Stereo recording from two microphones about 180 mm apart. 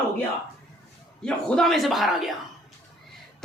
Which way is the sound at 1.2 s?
Centre (ahead or behind).